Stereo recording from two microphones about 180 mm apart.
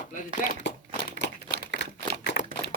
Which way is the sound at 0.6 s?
80° left.